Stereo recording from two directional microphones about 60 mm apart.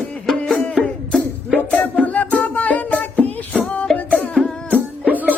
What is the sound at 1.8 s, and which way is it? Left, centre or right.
Music, left.